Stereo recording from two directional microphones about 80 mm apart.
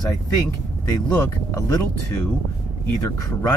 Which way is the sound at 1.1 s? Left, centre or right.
Left.